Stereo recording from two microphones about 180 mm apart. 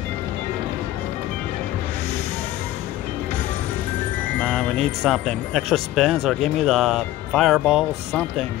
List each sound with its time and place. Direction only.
4.4 s speech: 5° left (ahead or behind)